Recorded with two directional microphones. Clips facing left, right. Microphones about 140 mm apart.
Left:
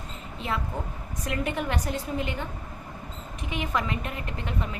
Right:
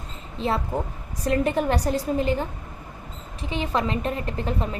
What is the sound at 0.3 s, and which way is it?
A woman's voice, 30° right (ahead or behind).